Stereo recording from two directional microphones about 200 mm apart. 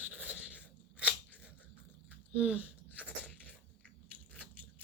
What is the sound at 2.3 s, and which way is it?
Speech, 5° right (ahead or behind).